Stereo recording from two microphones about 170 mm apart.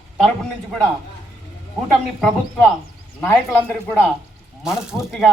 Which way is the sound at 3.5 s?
10° left (ahead or behind).